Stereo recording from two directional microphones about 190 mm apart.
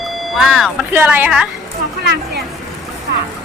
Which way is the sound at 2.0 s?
60° right (ahead or behind).